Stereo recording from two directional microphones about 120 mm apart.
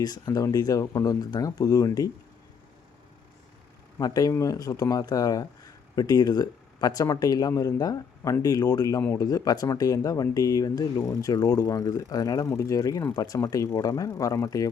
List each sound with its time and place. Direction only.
0.0 s speech: 30° left (ahead or behind)
3.9 s speech: 30° left (ahead or behind)